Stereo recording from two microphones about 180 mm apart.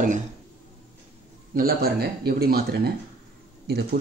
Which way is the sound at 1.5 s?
55° right (ahead or behind).